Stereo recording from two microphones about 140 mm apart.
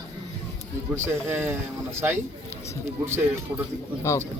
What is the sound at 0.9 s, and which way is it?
Speech, 15° right (ahead or behind).